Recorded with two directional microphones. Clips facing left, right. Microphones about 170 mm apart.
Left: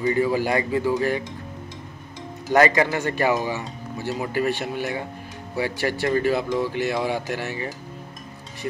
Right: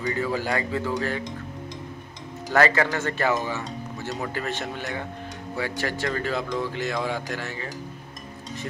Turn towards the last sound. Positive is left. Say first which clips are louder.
# left 4 dB
turn(degrees=15)  # may be behind; listen again after turning